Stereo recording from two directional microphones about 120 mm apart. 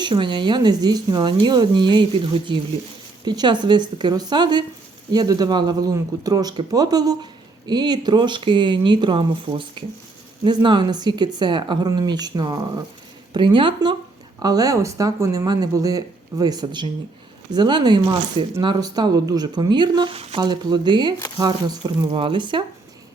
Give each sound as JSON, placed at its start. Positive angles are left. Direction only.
{"t": 0.0, "sound": "speech", "side_deg": -40}
{"t": 14.3, "sound": "speech", "side_deg": -30}